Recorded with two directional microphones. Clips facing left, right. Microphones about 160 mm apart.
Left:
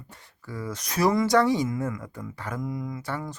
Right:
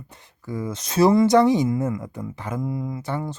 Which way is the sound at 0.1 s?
20° right (ahead or behind).